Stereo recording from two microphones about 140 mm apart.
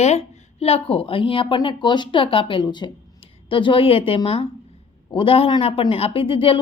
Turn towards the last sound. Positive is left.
turn(degrees=40)  # may be behind; listen again after turning